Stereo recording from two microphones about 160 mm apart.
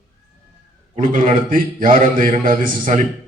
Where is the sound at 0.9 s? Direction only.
60° right (ahead or behind).